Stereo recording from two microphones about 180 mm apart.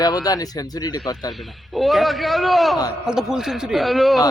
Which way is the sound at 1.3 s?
Centre (ahead or behind).